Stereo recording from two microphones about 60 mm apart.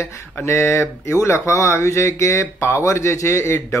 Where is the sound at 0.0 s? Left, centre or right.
Left.